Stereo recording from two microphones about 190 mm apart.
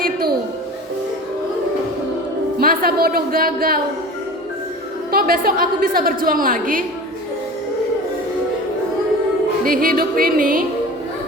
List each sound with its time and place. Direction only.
2.6 s a man's voice: 50° right (ahead or behind)
5.1 s a woman's voice: 50° right (ahead or behind)
9.6 s a woman's voice: 50° right (ahead or behind)